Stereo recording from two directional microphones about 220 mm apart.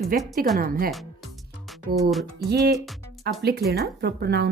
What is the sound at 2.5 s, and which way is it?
Speech, 45° right (ahead or behind).